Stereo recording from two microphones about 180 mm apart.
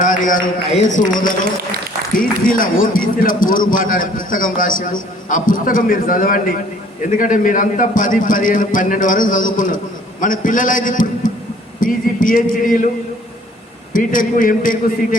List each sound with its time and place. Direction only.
0.0 s a man's voice: 45° left (ahead or behind)
13.9 s a man's voice: 50° left (ahead or behind)